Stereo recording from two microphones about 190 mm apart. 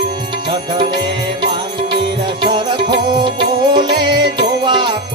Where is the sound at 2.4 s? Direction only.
25° right (ahead or behind).